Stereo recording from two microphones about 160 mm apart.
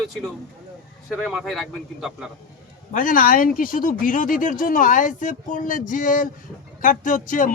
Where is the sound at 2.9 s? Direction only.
55° left (ahead or behind).